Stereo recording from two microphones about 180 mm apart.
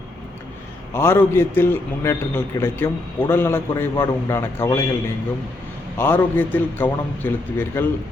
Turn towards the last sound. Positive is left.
turn(degrees=10)  # may be behind; listen again after turning